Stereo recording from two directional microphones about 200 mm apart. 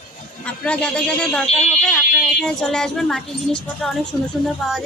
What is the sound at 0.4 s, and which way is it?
Speech, 5° left (ahead or behind).